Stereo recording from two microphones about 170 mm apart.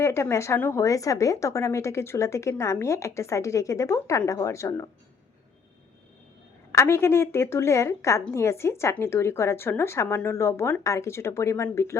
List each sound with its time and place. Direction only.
0.0 s a woman's voice: 15° left (ahead or behind)
6.7 s a woman's voice: 15° left (ahead or behind)